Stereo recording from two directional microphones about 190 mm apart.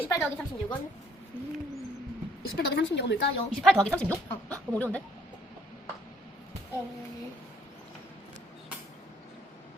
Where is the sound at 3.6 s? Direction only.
5° left (ahead or behind).